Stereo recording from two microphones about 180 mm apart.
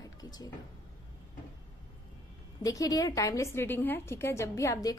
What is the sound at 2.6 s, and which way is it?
A woman's voice, 20° left (ahead or behind).